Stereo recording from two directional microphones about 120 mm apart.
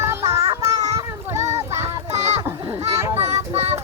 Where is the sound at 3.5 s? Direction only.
60° right (ahead or behind).